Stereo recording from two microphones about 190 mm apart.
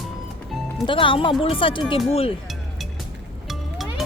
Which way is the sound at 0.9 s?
25° left (ahead or behind).